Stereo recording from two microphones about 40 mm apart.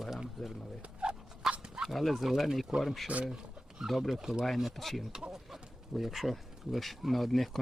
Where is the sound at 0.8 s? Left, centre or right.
Right.